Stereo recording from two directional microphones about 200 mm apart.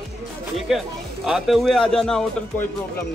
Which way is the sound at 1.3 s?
Centre (ahead or behind).